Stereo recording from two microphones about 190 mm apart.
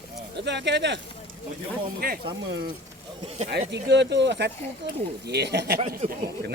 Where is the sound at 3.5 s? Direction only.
65° right (ahead or behind).